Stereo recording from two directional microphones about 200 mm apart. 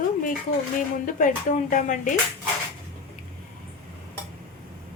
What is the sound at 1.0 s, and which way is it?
Speech, 40° left (ahead or behind).